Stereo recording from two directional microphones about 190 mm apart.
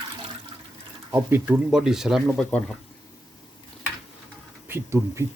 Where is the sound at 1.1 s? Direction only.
10° right (ahead or behind); by 2.8 s 5° left (ahead or behind).